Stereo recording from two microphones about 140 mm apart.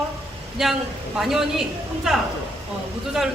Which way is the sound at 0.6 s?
Centre (ahead or behind).